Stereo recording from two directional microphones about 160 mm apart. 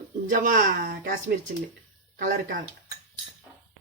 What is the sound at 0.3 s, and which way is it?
Speech, 55° right (ahead or behind).